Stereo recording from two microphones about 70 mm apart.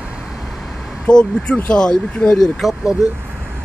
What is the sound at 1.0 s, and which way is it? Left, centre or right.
Speech, centre.